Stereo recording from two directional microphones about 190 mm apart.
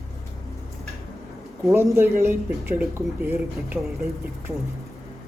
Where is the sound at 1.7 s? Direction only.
15° right (ahead or behind).